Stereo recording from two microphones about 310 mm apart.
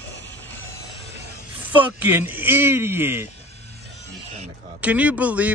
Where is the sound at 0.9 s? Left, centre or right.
Right.